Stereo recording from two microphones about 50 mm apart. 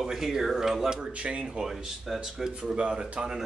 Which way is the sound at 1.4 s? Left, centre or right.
Centre.